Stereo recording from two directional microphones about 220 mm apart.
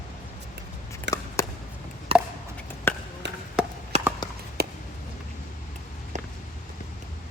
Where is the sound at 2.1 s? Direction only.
25° right (ahead or behind).